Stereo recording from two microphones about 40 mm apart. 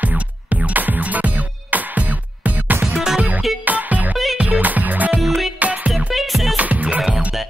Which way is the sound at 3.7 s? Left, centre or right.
Right.